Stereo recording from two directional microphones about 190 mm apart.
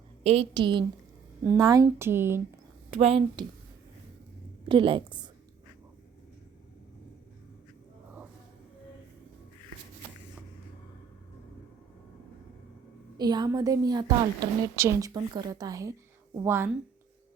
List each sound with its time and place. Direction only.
0.2 s a woman's voice: 30° right (ahead or behind); by 2.4 s 10° right (ahead or behind)
2.9 s a woman's voice: 30° right (ahead or behind)
4.7 s a woman's voice: 25° right (ahead or behind)
13.1 s a woman's voice: 20° right (ahead or behind)